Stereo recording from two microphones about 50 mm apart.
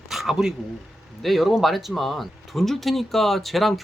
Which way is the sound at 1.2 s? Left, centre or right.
Centre.